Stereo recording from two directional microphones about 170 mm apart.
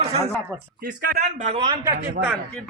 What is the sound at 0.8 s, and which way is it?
Speech, 60° right (ahead or behind).